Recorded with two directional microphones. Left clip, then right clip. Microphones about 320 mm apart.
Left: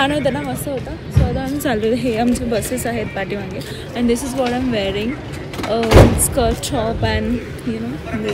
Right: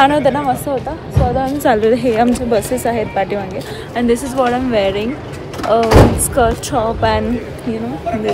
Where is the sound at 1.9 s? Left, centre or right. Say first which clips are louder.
Right 5 dB; centre.